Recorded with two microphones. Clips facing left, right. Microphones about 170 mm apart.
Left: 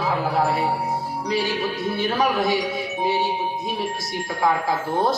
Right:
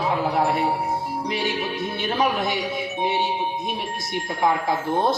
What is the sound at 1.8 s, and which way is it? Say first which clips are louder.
Speech: left 1 dB; 20° right (ahead or behind).